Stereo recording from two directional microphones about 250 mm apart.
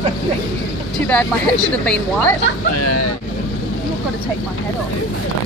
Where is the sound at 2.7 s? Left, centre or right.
Left.